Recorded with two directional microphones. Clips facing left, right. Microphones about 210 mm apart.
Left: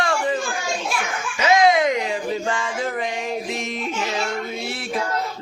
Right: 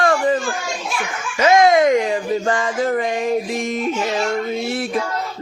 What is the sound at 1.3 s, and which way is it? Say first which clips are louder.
Speech: right 4 dB; 50° right (ahead or behind).